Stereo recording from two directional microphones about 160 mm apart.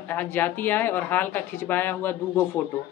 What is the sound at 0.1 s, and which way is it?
Speech, 10° left (ahead or behind).